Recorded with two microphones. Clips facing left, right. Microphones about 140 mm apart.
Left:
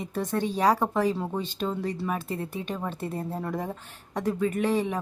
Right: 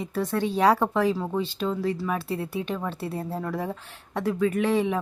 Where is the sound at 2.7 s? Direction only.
15° left (ahead or behind).